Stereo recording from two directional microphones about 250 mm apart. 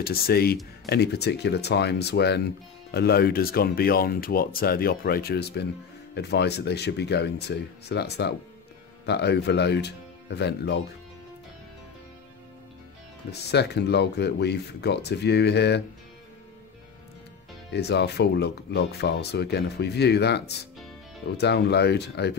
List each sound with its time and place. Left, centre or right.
0.0 s speech: left
13.3 s speech: left
17.7 s speech: left